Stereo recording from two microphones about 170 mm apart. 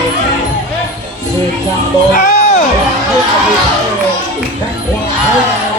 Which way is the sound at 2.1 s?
45° left (ahead or behind).